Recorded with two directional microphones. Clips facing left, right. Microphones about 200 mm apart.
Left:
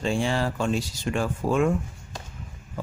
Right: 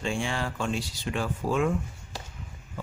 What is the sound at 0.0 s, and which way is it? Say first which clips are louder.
Speech: left 5 dB; 35° left (ahead or behind).